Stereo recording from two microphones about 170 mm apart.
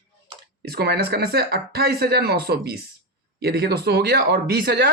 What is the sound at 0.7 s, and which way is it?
Speech, 70° right (ahead or behind).